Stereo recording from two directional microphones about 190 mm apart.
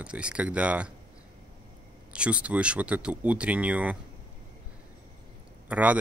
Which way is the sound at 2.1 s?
5° right (ahead or behind).